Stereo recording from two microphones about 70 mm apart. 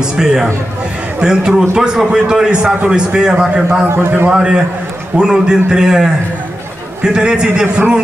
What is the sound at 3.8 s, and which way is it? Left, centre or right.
Speech, right.